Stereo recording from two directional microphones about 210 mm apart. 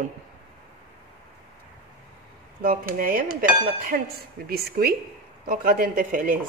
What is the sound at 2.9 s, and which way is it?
A woman's voice, 40° right (ahead or behind).